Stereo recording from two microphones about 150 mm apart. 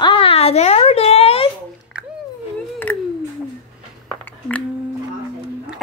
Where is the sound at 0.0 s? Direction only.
35° left (ahead or behind).